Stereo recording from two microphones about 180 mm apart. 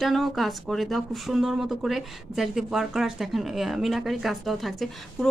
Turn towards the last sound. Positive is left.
turn(degrees=0)  # may be behind; listen again after turning